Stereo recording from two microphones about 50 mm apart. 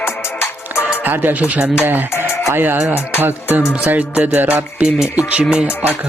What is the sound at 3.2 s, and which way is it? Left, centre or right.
Speech, right.